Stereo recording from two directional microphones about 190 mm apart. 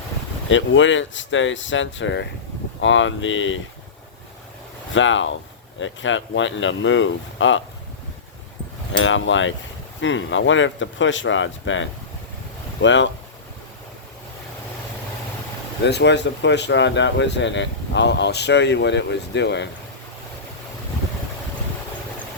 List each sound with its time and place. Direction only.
0.4 s speech: 85° left
4.9 s speech: 85° left
8.9 s speech: 80° left
15.8 s speech: 65° left (ahead or behind)